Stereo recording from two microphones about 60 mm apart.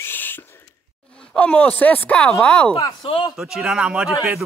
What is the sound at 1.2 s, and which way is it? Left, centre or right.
Speech, centre.